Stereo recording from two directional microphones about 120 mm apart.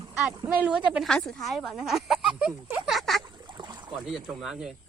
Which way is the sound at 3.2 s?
40° right (ahead or behind).